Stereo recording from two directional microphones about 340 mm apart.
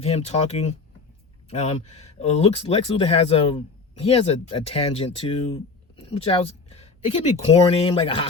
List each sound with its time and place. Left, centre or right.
0.0 s speech: centre